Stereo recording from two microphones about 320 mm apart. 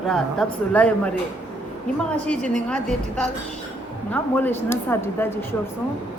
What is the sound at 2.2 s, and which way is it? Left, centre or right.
A woman's voice, centre.